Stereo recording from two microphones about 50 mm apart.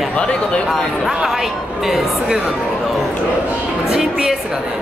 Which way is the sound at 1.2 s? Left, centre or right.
Centre.